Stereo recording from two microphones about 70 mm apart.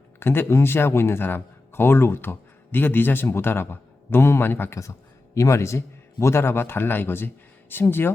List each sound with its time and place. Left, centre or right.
0.2 s speech: left
4.8 s a man's voice: left